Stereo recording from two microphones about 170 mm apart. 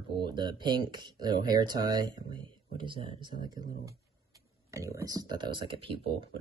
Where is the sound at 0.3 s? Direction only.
25° right (ahead or behind).